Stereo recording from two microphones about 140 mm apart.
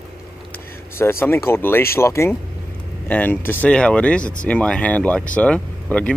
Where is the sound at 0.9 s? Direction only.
15° left (ahead or behind).